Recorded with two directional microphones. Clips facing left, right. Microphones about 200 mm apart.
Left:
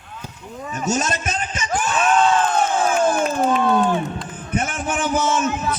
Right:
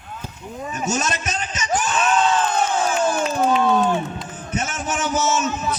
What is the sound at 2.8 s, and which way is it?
Crowd, 50° left (ahead or behind).